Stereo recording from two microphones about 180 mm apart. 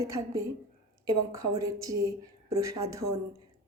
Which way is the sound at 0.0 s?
15° right (ahead or behind).